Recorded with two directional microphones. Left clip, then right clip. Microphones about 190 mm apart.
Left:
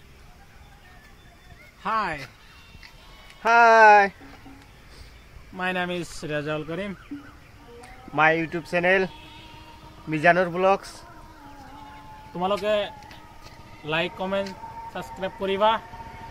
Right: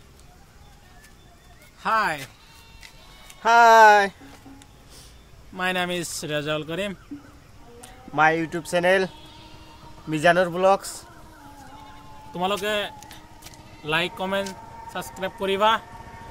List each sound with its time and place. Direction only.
1.8 s speech: 10° right (ahead or behind)
3.5 s speech: 10° right (ahead or behind)
5.6 s speech: 15° right (ahead or behind)
8.1 s speech: 5° left (ahead or behind)
8.5 s speech: 5° right (ahead or behind)
10.0 s speech: 15° right (ahead or behind)
12.4 s speech: 10° right (ahead or behind)